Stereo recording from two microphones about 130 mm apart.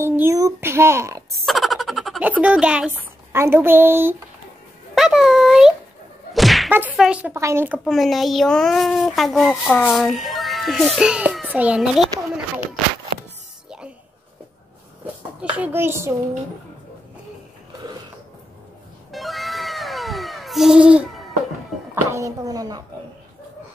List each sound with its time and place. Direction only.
0.0 s speech: 20° right (ahead or behind)
1.4 s a sound: centre (ahead or behind)
2.2 s speech: 10° right (ahead or behind)
4.9 s speech: 5° right (ahead or behind)
6.3 s whack: centre (ahead or behind)
7.0 s speech: 10° right (ahead or behind)
7.3 s speech: 20° right (ahead or behind)
7.8 s a child's voice: centre (ahead or behind)
13.7 s music: 10° right (ahead or behind)
15.5 s speech: 15° right (ahead or behind)
19.1 s cat: centre (ahead or behind)
22.1 s speech: 25° right (ahead or behind)